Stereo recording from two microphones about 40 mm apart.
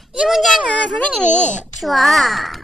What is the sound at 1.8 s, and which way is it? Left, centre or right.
Speech, centre.